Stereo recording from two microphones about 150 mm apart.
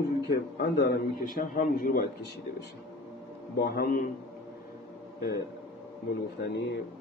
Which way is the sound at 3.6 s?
90° left.